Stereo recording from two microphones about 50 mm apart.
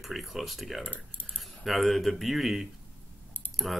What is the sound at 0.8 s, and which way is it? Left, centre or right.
Keys jangling, left.